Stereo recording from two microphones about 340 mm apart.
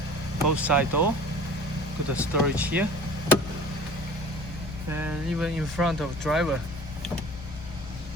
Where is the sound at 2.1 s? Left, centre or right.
Centre.